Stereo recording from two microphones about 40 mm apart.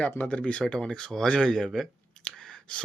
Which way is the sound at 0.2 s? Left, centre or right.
Left.